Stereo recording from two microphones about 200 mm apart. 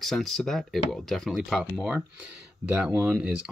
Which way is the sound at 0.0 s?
Centre (ahead or behind).